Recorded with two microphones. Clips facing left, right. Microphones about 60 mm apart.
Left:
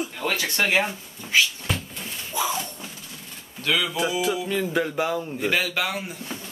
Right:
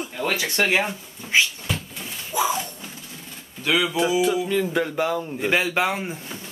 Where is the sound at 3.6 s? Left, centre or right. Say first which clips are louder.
Right 3 dB; centre.